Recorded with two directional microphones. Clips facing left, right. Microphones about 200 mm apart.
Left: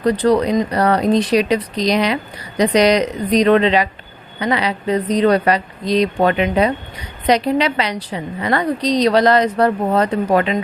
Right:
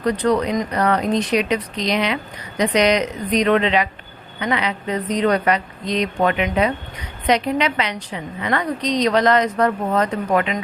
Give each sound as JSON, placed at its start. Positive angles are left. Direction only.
{"t": 0.0, "sound": "a woman's voice", "side_deg": 35}